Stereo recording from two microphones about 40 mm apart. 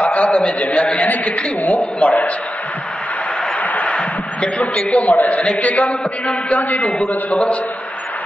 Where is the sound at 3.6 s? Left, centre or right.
Left.